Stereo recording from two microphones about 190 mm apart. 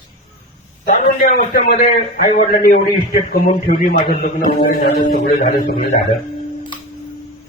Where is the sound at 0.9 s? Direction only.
50° left (ahead or behind).